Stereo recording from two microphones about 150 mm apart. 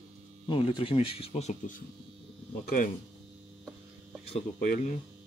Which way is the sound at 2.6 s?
65° left (ahead or behind).